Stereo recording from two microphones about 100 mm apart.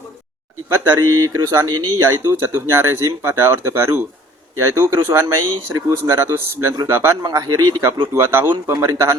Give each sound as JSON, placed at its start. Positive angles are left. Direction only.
{"t": 0.7, "sound": "speech", "side_deg": -30}
{"t": 7.2, "sound": "speech", "side_deg": -40}
{"t": 8.1, "sound": "speech", "side_deg": -25}